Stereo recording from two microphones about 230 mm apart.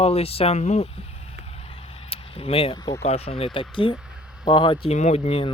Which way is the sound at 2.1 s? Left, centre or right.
Left.